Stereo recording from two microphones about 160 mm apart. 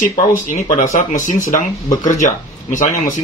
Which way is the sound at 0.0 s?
55° left (ahead or behind).